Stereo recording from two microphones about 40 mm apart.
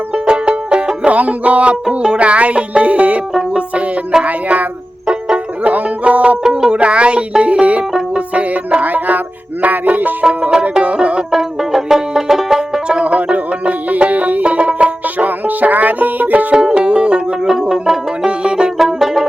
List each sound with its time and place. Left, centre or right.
0.1 s music: right
4.2 s music: right
5.6 s music: right
6.4 s music: centre; by 10.2 s right
10.5 s music: right
11.3 s banjo: centre
13.2 s music: right
16.6 s music: right
18.8 s music: centre